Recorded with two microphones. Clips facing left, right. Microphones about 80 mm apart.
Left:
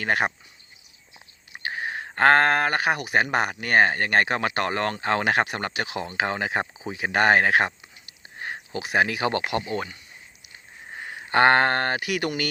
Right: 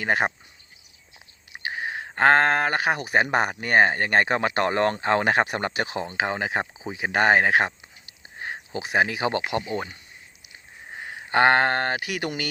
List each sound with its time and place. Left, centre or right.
0.0 s speech: right
1.5 s a sound: centre
2.1 s speech: centre
8.4 s a sound: centre
9.0 s speech: centre
11.0 s speech: centre
12.0 s speech: centre